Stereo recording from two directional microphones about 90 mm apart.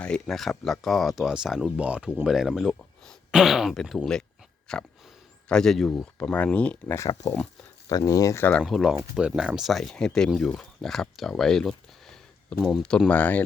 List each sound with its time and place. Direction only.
0.0 s speech: 5° left (ahead or behind)
6.3 s speech: 15° left (ahead or behind)
6.8 s speech: 30° left (ahead or behind)
7.9 s speech: 40° left (ahead or behind)
8.6 s speech: centre (ahead or behind)
13.1 s speech: 15° left (ahead or behind)